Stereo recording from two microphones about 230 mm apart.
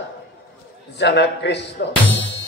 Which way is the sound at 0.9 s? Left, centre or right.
Left.